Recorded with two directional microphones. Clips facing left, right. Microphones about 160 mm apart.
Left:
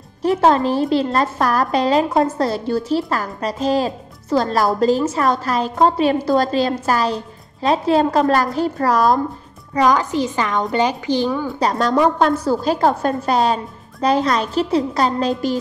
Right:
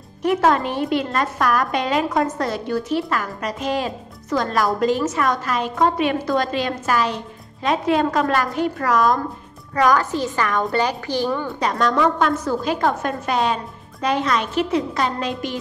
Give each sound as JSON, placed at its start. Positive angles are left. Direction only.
{"t": 0.2, "sound": "a woman's voice", "side_deg": 30}
{"t": 9.8, "sound": "a woman's voice", "side_deg": 20}
{"t": 11.6, "sound": "a woman's voice", "side_deg": 35}